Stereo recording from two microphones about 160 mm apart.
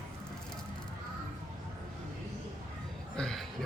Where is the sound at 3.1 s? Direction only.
5° left (ahead or behind).